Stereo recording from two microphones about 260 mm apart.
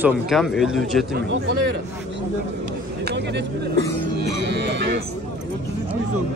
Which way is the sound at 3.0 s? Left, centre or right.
Right.